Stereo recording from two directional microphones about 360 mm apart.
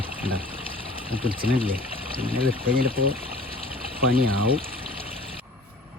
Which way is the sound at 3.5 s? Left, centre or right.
Centre.